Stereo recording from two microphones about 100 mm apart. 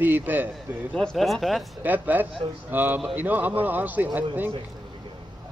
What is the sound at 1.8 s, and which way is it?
A man's voice, 15° right (ahead or behind).